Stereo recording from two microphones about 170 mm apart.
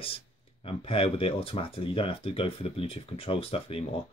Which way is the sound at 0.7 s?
35° left (ahead or behind).